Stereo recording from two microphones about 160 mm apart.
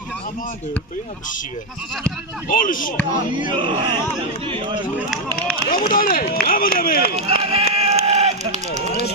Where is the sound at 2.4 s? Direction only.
60° left (ahead or behind).